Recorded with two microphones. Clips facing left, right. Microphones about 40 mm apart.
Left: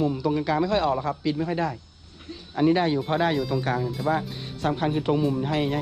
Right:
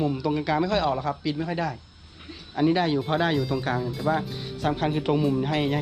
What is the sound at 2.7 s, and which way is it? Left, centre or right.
Speech, right.